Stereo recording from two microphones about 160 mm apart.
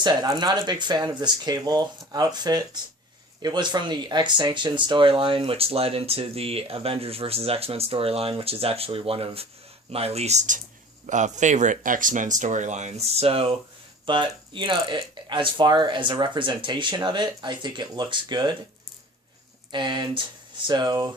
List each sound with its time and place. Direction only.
0.0 s speech: 25° right (ahead or behind)
19.7 s speech: 30° right (ahead or behind)